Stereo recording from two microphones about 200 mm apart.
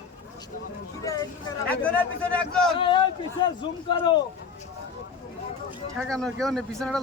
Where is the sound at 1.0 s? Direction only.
15° left (ahead or behind).